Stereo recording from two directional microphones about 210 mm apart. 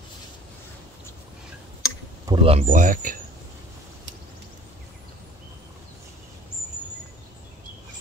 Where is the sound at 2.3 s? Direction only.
25° right (ahead or behind).